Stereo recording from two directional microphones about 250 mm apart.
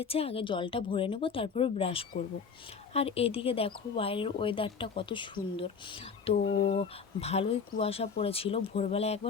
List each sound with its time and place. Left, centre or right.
0.0 s speech: left